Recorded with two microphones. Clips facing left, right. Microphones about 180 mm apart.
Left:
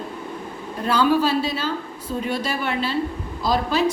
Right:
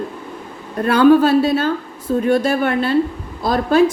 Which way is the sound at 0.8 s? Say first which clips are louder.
Right 8 dB; 55° right (ahead or behind).